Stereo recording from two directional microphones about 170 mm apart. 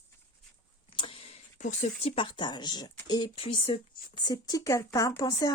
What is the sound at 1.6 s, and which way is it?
Speech, 40° left (ahead or behind).